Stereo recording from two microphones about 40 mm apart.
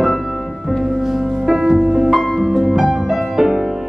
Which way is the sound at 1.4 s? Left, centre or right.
Centre.